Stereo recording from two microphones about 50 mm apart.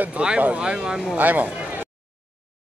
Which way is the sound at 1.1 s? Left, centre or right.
Right.